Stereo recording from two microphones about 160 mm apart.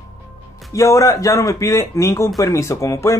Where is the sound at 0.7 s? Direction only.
20° left (ahead or behind).